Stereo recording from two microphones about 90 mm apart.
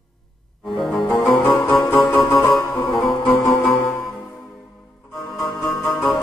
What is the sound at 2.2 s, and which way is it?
Music, 25° left (ahead or behind).